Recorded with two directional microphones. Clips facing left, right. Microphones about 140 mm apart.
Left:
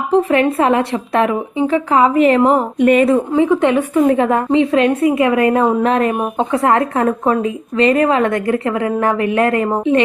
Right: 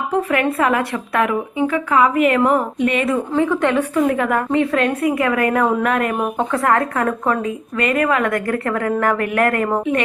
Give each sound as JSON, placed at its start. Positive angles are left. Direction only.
{"t": 0.1, "sound": "a woman's voice", "side_deg": 25}
{"t": 2.8, "sound": "a woman's voice", "side_deg": 40}
{"t": 3.3, "sound": "a woman's voice", "side_deg": 20}